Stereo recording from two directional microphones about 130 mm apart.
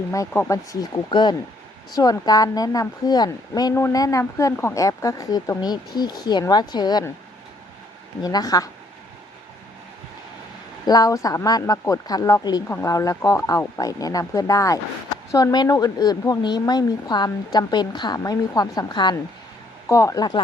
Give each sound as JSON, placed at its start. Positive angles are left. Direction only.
{"t": 0.1, "sound": "speech", "side_deg": 20}
{"t": 8.2, "sound": "speech", "side_deg": 30}
{"t": 10.8, "sound": "speech", "side_deg": 30}
{"t": 19.9, "sound": "speech", "side_deg": 25}